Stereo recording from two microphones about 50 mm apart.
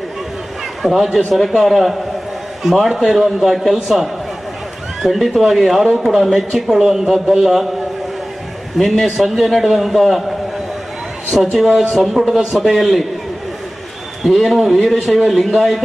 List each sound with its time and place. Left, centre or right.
0.8 s a man's voice: centre
8.7 s a man's voice: centre
11.5 s a man's voice: centre
14.2 s a man's voice: centre